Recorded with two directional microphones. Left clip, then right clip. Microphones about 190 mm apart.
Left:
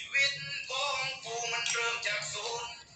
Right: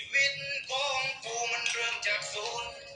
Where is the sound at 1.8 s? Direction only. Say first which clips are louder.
Right 2 dB; 40° right (ahead or behind).